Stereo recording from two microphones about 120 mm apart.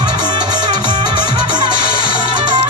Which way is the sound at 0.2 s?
35° right (ahead or behind).